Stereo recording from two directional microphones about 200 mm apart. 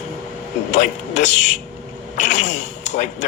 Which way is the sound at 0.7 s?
35° left (ahead or behind).